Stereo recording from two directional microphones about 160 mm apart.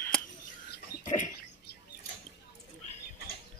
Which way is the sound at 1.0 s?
45° left (ahead or behind).